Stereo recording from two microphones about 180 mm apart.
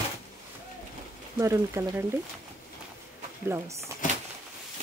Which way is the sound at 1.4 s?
15° right (ahead or behind).